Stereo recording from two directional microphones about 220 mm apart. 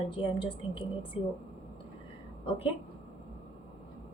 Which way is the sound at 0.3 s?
25° left (ahead or behind).